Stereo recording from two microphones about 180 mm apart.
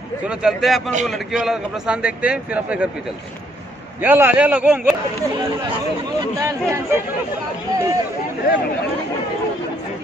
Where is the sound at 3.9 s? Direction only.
10° right (ahead or behind).